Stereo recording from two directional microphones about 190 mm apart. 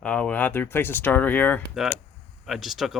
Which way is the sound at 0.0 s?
5° left (ahead or behind).